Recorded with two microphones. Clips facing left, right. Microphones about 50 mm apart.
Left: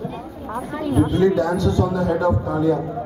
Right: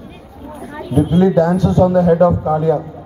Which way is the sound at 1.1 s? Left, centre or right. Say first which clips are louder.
Right 5 dB; right.